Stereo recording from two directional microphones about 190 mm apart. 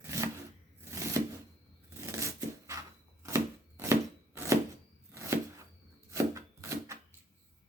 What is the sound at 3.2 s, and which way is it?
Chopping, 15° right (ahead or behind).